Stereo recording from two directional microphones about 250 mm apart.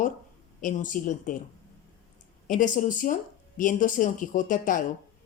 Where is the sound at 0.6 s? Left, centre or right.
Left.